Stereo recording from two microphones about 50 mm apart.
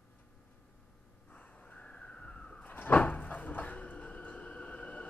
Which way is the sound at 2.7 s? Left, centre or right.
Left.